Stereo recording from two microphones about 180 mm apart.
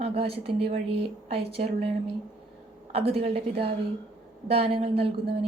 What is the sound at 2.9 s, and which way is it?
Speech, 30° right (ahead or behind).